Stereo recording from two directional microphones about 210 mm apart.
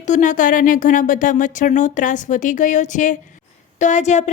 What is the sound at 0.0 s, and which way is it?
Speech, 35° left (ahead or behind).